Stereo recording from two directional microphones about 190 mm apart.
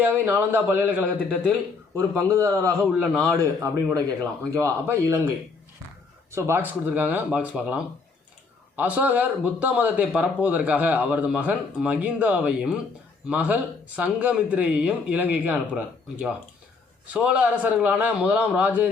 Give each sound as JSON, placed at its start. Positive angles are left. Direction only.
{"t": 0.0, "sound": "a man's voice", "side_deg": -10}
{"t": 2.9, "sound": "a man's voice", "side_deg": -5}
{"t": 3.3, "sound": "a man's voice", "side_deg": -15}
{"t": 6.3, "sound": "a man's voice", "side_deg": -10}